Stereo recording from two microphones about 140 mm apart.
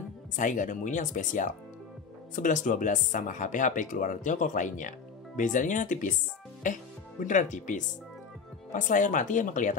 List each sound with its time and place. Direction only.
0.4 s speech: 65° left (ahead or behind)